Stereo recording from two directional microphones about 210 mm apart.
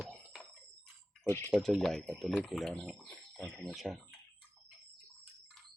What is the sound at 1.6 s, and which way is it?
Speech, centre (ahead or behind).